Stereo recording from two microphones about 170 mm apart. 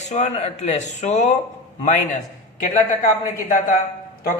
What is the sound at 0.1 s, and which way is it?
Speech, 40° left (ahead or behind).